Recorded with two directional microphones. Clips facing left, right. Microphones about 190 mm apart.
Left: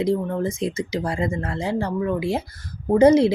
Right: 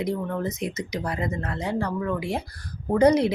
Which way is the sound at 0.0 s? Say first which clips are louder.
Left 5 dB; 25° left (ahead or behind).